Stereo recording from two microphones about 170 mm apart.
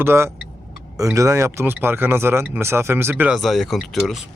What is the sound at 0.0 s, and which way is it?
Speech, 15° right (ahead or behind).